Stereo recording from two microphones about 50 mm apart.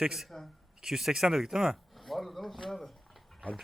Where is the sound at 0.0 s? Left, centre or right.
Centre.